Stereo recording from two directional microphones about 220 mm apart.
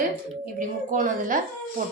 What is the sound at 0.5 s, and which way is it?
A woman's voice, 35° right (ahead or behind).